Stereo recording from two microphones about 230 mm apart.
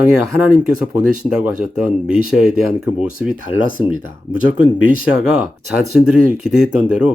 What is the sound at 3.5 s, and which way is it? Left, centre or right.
Speech, left.